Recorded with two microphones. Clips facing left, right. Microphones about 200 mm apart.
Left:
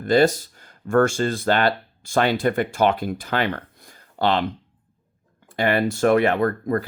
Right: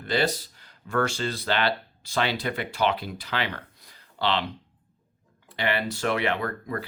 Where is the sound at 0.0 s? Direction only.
45° left (ahead or behind).